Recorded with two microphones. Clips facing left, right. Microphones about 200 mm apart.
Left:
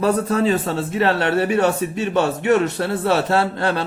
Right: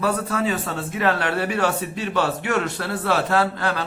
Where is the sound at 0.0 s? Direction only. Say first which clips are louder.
Left 5 dB; 30° left (ahead or behind).